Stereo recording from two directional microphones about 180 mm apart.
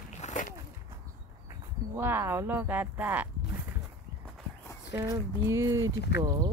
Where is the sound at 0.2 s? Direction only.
45° left (ahead or behind).